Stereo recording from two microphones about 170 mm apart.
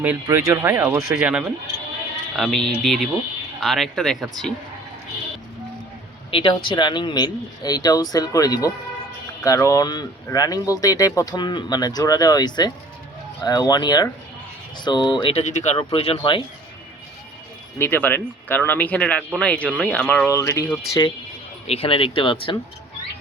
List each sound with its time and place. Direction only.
0.0 s speech: 10° right (ahead or behind)
6.3 s speech: 30° left (ahead or behind)
17.7 s speech: 10° left (ahead or behind)
21.7 s speech: 35° left (ahead or behind)